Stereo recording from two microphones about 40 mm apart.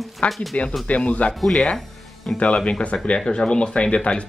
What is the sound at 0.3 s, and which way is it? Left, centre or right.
Speech, centre.